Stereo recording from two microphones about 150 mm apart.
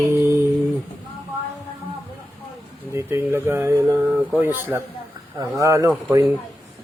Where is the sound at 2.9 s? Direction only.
15° right (ahead or behind).